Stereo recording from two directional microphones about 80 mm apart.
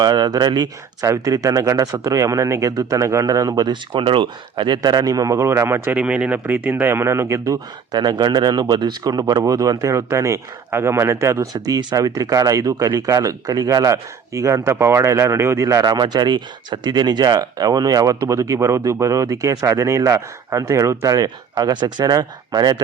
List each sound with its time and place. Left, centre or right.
0.0 s speech: right
1.1 s speech: right
3.9 s speech: right
6.0 s speech: centre; by 7.6 s right
7.9 s speech: right
11.5 s speech: right
15.9 s speech: right